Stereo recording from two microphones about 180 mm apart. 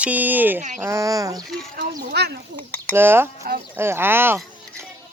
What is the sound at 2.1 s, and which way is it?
Speech, 65° right (ahead or behind).